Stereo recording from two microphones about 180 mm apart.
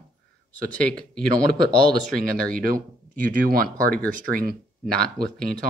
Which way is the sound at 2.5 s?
50° right (ahead or behind).